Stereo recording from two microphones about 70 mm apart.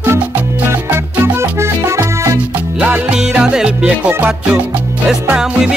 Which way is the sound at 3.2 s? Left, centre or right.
Centre.